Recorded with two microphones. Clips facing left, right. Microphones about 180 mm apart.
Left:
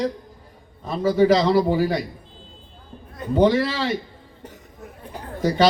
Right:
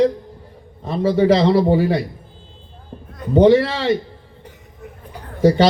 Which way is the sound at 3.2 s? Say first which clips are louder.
Right 1 dB; centre (ahead or behind).